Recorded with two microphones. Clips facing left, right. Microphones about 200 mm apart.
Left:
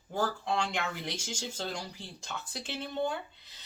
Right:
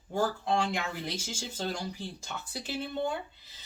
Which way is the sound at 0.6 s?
5° right (ahead or behind).